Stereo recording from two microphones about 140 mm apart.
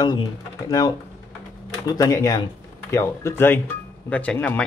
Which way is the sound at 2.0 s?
25° left (ahead or behind).